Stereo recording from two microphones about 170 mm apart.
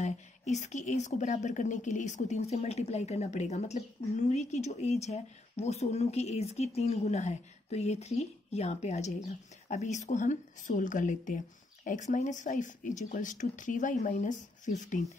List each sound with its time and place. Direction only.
0.0 s a woman's voice: 45° left (ahead or behind)